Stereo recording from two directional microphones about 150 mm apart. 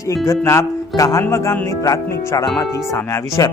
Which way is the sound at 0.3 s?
20° left (ahead or behind).